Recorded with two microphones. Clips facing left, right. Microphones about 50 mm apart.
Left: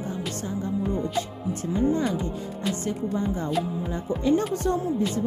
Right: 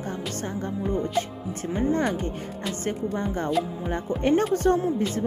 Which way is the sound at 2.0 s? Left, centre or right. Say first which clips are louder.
Right 1 dB; right.